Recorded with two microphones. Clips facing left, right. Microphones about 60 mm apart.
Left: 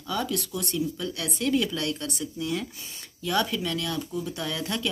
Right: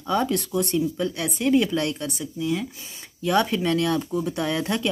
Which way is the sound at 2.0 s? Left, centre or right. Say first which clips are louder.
Right 4 dB; centre.